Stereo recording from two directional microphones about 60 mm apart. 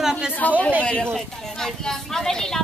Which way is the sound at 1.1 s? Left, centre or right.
Centre.